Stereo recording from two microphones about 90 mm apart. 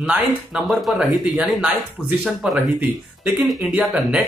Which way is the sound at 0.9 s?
10° right (ahead or behind).